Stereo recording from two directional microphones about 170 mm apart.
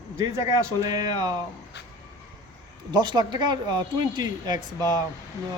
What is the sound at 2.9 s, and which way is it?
Speech, 25° right (ahead or behind).